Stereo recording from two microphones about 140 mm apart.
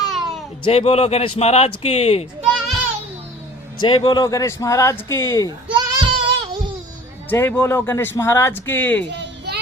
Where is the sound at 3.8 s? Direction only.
35° left (ahead or behind).